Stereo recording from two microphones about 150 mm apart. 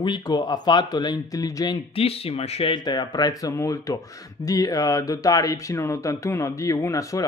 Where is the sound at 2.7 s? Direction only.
30° left (ahead or behind).